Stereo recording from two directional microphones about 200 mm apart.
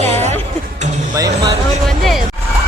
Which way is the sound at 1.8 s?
Centre (ahead or behind).